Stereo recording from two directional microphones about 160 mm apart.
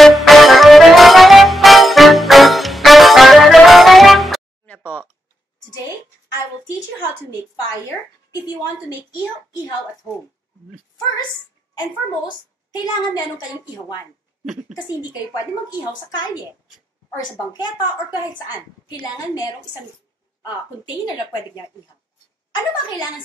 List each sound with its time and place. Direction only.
0.0 s music: centre (ahead or behind)
12.7 s a woman's voice: 25° left (ahead or behind)
17.2 s a woman's voice: 25° left (ahead or behind)
22.5 s a woman's voice: 30° left (ahead or behind)